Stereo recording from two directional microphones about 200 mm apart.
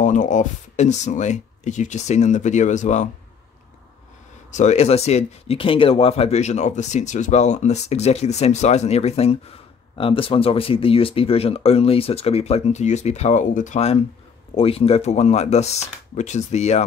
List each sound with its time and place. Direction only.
0.0 s speech: 40° left (ahead or behind)
4.5 s speech: 35° left (ahead or behind)